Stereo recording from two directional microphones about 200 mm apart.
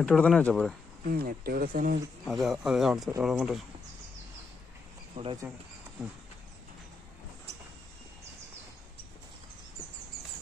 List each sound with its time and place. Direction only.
0.0 s speech: centre (ahead or behind)
1.0 s speech: 50° right (ahead or behind)
2.2 s speech: centre (ahead or behind)
5.1 s speech: 30° right (ahead or behind)